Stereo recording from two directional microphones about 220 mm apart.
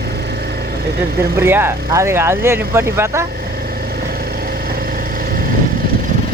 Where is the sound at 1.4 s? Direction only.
10° right (ahead or behind).